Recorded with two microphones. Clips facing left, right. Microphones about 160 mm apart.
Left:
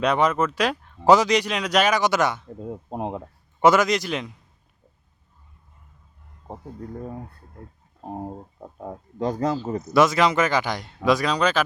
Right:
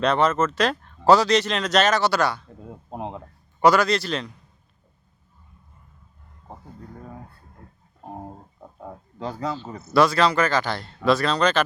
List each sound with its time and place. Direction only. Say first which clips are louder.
0.0 s a man's voice: even; 15° left (ahead or behind)
9.4 s speech: left 5 dB; 45° left (ahead or behind)
9.9 s speech: even; 20° left (ahead or behind)